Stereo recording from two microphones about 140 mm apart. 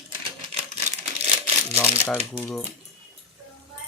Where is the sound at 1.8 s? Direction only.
10° left (ahead or behind).